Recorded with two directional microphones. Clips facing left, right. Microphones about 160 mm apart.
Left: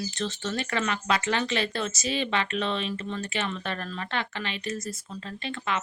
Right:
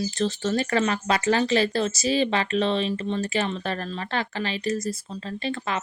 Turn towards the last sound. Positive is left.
turn(degrees=-35)  # may be behind; listen again after turning